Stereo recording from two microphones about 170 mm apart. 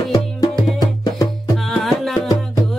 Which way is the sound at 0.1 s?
20° left (ahead or behind).